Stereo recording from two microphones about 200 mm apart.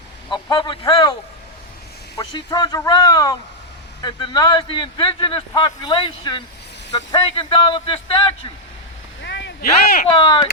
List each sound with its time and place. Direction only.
0.3 s speech: 20° left (ahead or behind)
2.1 s a man's voice: 20° left (ahead or behind)
9.2 s a sound: 65° left (ahead or behind); by 10.1 s 45° left (ahead or behind)
10.2 s a man's voice: 25° left (ahead or behind)